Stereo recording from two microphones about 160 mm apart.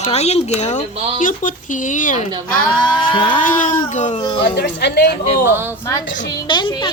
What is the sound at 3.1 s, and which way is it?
Speech, 35° left (ahead or behind).